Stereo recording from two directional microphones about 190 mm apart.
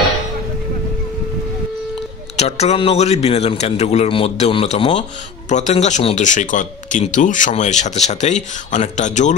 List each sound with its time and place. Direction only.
2.3 s speech: 35° left (ahead or behind)